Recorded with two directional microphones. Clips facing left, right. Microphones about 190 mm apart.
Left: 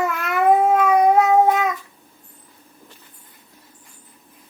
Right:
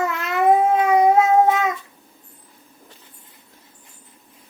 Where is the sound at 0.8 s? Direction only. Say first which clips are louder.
Even; 25° right (ahead or behind).